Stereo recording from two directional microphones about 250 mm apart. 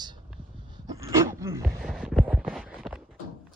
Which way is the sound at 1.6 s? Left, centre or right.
Centre.